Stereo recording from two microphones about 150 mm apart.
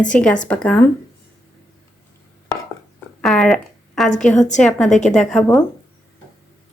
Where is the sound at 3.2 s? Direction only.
5° left (ahead or behind).